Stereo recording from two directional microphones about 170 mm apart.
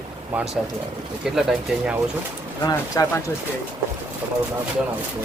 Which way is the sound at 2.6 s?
20° left (ahead or behind).